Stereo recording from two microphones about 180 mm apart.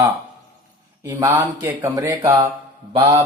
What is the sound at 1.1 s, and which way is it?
Speech, 10° right (ahead or behind).